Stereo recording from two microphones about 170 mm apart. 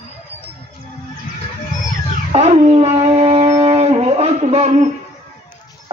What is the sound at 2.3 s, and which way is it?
Dog, 40° right (ahead or behind).